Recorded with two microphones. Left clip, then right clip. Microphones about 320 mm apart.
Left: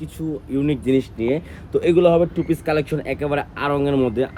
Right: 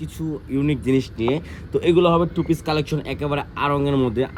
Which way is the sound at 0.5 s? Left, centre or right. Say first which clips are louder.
Left 1 dB; centre.